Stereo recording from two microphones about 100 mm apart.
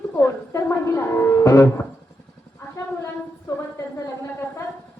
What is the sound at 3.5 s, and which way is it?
Speech, 30° left (ahead or behind).